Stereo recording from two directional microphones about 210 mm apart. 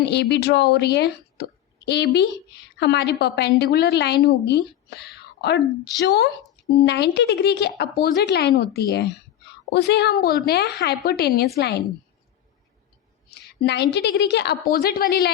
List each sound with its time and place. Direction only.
0.1 s a woman's voice: 55° left (ahead or behind)
13.6 s a woman's voice: 55° left (ahead or behind)